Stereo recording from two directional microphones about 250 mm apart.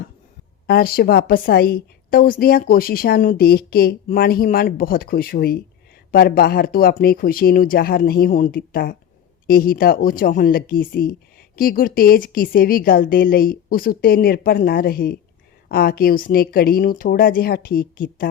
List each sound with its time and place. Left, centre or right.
0.7 s speech: left